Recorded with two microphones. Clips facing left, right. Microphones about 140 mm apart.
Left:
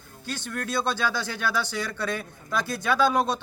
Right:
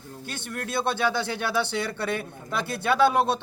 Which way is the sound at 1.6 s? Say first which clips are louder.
Right 2 dB; 60° right (ahead or behind).